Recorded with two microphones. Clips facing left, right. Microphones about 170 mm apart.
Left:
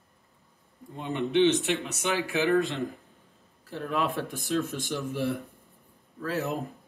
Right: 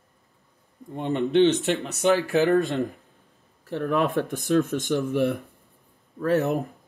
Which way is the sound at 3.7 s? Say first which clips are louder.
Right 6 dB; 65° right (ahead or behind).